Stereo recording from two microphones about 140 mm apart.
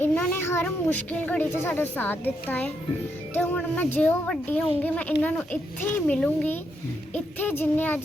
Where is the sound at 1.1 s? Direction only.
10° left (ahead or behind).